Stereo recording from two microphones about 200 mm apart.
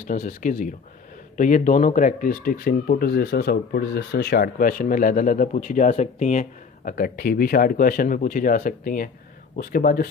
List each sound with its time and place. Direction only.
0.1 s speech: 40° left (ahead or behind)